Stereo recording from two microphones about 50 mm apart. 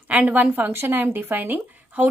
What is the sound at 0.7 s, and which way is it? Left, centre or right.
Speech, right.